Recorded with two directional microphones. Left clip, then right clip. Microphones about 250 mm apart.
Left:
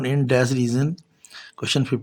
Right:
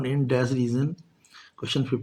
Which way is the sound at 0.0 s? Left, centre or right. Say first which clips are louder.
Left 5 dB; left.